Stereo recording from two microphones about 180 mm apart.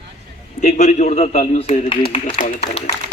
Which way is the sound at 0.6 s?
40° left (ahead or behind).